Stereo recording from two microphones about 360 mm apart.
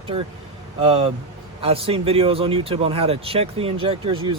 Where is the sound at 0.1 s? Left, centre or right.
Centre.